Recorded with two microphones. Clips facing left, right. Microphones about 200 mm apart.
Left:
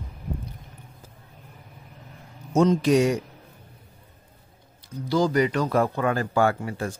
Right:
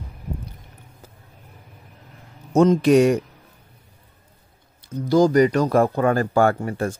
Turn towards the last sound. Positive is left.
turn(degrees=-50)  # may be behind; listen again after turning